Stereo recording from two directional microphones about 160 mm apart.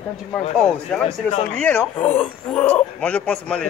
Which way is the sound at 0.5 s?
5° left (ahead or behind).